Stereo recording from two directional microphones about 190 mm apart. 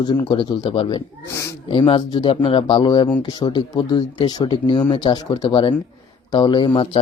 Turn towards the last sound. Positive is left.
turn(degrees=25)  # may be behind; listen again after turning